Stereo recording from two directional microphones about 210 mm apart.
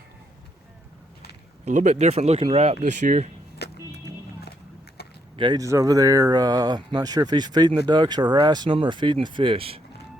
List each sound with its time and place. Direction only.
1.6 s speech: 35° right (ahead or behind)
3.6 s vehicle: 50° left (ahead or behind)
5.0 s a sound: 50° left (ahead or behind)
5.4 s speech: 20° right (ahead or behind)